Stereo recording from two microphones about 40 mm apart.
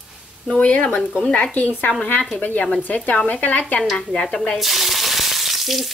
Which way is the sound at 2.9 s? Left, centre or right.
Left.